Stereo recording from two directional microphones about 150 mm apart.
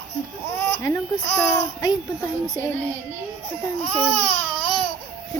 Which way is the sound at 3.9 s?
5° left (ahead or behind).